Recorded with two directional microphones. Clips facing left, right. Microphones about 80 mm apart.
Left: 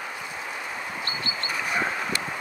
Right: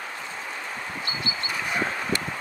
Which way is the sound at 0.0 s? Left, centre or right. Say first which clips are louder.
Left 1 dB; centre.